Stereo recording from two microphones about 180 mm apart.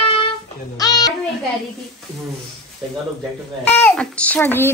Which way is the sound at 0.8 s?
20° left (ahead or behind).